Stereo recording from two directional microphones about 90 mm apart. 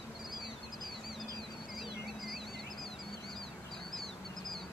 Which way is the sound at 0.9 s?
Centre (ahead or behind).